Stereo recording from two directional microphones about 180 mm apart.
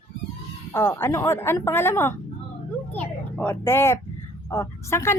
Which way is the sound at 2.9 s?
10° left (ahead or behind).